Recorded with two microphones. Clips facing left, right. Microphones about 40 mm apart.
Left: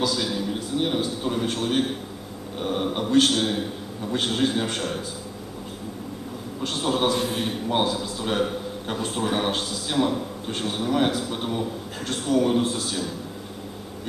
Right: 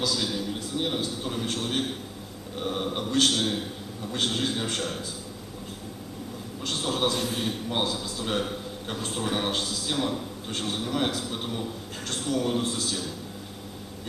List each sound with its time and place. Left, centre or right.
0.0 s a man's voice: centre
6.6 s a man's voice: centre
7.2 s a man's voice: left
7.7 s a man's voice: centre